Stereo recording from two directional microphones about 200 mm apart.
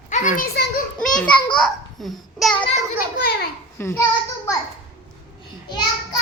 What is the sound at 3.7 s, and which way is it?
Speech, 10° left (ahead or behind).